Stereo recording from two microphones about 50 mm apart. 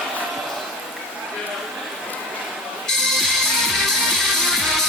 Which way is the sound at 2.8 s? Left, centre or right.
Centre.